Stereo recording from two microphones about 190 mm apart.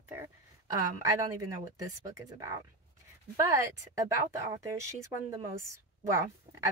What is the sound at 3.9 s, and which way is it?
Speech, 15° right (ahead or behind).